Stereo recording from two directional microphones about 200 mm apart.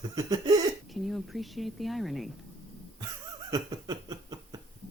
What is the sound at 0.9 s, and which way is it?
Speech, centre (ahead or behind).